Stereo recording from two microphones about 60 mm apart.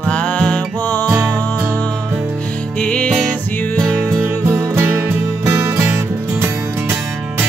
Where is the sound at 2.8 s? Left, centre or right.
Centre.